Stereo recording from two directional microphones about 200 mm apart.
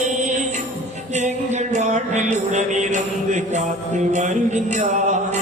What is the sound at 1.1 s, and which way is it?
Music, 35° right (ahead or behind).